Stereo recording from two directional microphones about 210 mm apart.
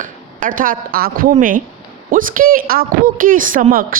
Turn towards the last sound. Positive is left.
turn(degrees=-45)  # may be behind; listen again after turning